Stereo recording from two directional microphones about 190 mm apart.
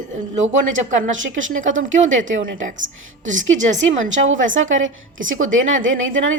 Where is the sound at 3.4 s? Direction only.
40° right (ahead or behind).